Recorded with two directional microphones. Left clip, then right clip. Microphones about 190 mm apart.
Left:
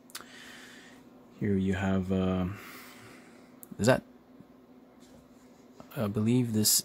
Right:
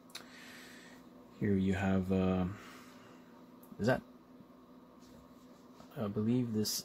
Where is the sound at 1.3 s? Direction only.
5° left (ahead or behind).